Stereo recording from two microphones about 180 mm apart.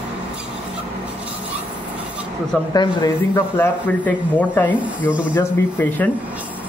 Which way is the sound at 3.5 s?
10° left (ahead or behind).